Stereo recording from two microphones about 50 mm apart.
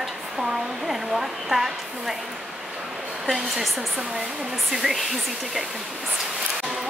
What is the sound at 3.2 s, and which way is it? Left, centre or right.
Speech, centre.